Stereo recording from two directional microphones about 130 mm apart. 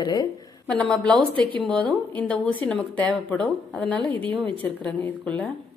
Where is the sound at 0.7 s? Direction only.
5° left (ahead or behind).